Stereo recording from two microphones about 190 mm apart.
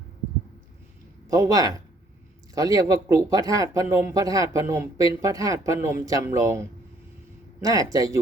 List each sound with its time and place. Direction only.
1.3 s speech: 15° right (ahead or behind)